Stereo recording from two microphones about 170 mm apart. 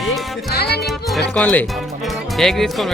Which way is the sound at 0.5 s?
70° left (ahead or behind).